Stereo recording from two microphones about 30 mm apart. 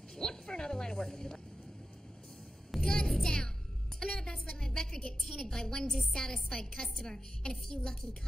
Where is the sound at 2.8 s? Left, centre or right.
Left.